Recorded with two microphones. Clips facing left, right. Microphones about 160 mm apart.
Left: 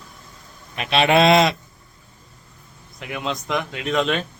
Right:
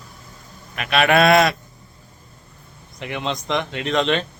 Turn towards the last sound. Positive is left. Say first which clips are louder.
# right 1 dB
turn(degrees=5)  # may be behind; listen again after turning